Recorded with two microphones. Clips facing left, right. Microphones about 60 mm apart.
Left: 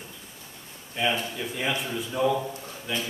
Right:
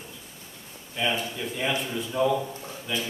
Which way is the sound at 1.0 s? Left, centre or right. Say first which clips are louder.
Left 1 dB; centre.